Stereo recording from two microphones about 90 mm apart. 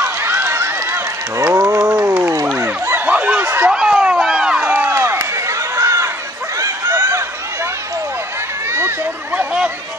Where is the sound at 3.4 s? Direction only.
25° right (ahead or behind).